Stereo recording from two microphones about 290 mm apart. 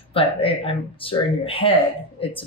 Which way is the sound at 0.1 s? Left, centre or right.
Centre.